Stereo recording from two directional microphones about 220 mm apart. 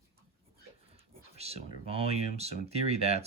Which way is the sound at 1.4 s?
30° right (ahead or behind).